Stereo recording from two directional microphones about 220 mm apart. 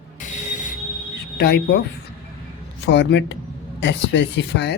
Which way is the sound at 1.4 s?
50° left (ahead or behind).